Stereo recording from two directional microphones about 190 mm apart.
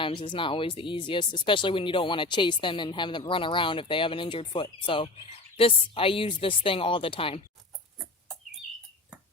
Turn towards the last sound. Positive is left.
turn(degrees=30)  # may be behind; listen again after turning